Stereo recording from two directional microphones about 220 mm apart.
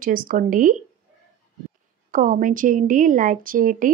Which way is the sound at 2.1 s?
40° right (ahead or behind).